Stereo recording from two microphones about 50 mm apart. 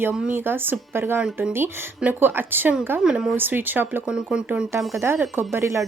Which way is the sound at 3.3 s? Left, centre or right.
Right.